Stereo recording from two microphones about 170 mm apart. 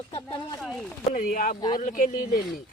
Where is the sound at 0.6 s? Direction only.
Centre (ahead or behind).